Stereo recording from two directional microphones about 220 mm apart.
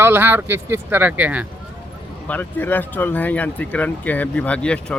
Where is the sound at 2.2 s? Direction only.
10° left (ahead or behind).